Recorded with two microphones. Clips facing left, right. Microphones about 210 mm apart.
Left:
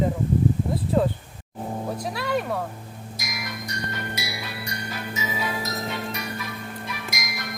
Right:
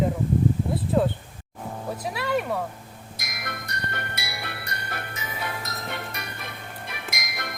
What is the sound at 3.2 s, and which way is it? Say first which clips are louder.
Music: left 2 dB; 55° right (ahead or behind).